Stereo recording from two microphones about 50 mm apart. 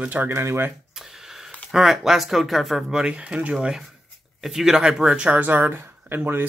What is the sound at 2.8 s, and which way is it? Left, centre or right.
Speech, centre.